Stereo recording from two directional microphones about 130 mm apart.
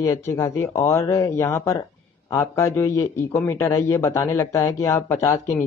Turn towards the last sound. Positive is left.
turn(degrees=20)  # may be behind; listen again after turning